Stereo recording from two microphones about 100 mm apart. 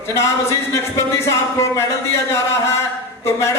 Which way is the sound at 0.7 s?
30° left (ahead or behind).